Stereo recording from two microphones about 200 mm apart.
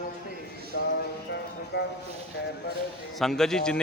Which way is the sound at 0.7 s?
55° left (ahead or behind).